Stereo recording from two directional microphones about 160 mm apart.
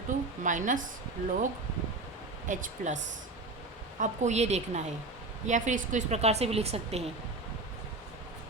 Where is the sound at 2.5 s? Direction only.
50° right (ahead or behind).